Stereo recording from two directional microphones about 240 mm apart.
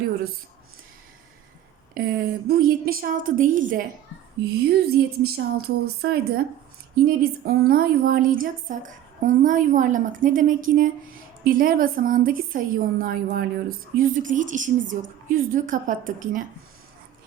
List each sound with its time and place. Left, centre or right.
2.0 s a woman's voice: right